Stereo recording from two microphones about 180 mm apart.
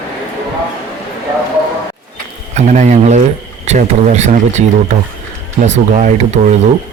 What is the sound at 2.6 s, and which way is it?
Speech, 40° right (ahead or behind).